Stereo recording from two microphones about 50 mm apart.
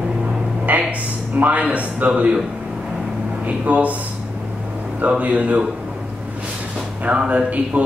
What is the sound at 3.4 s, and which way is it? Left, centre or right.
A man's voice, right.